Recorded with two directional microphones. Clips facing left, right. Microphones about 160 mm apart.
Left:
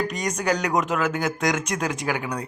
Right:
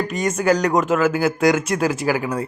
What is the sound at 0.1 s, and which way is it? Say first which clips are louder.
Speech: right 6 dB; 5° right (ahead or behind).